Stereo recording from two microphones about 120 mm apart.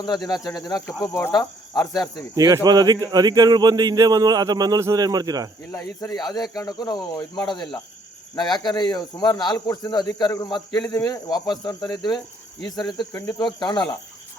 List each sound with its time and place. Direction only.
0.0 s speech: 35° left (ahead or behind)
2.3 s speech: 30° right (ahead or behind)
5.7 s speech: 30° left (ahead or behind)